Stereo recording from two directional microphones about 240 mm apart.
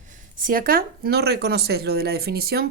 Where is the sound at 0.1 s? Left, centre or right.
Right.